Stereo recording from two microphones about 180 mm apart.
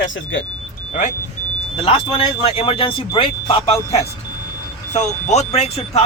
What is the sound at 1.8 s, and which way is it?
Speech, 30° left (ahead or behind).